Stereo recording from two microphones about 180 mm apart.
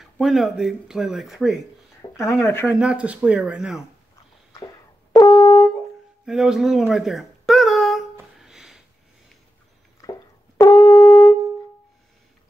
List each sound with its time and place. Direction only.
0.0 s speech: centre (ahead or behind)
2.0 s a sound: 15° left (ahead or behind)
2.4 s speech: 15° left (ahead or behind)
2.7 s speech: 5° right (ahead or behind)
5.1 s brass instrument: 20° left (ahead or behind)
6.2 s a sound: 5° right (ahead or behind)
10.0 s music: 20° left (ahead or behind)
10.6 s shofar: 15° left (ahead or behind)